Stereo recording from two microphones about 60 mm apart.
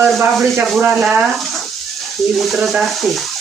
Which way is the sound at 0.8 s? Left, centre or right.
Right.